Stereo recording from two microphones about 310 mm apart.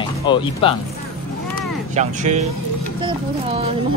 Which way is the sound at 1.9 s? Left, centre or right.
Right.